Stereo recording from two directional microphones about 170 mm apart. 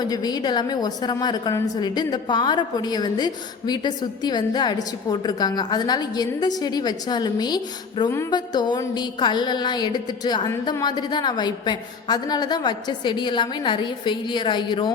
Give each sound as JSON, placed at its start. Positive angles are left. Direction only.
{"t": 0.0, "sound": "a woman's voice", "side_deg": 25}